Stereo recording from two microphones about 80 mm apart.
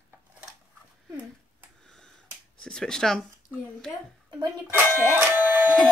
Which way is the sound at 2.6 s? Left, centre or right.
Centre.